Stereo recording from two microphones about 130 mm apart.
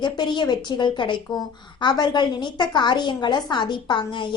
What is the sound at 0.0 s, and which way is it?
A woman's voice, 35° left (ahead or behind).